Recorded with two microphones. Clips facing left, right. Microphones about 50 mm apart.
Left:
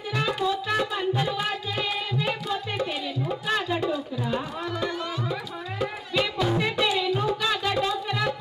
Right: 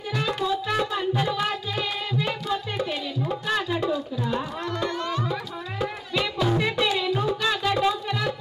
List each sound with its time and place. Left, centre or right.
0.1 s music: centre
0.4 s music: centre